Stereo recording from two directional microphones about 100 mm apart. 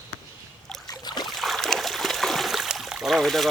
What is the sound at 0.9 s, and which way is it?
Boat, 45° left (ahead or behind).